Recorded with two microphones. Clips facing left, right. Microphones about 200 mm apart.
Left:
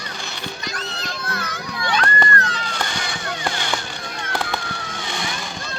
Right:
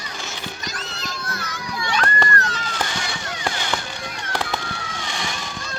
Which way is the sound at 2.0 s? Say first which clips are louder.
Even; 40° right (ahead or behind).